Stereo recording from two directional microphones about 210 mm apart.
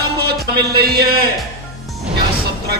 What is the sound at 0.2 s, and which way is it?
Speech, 50° right (ahead or behind).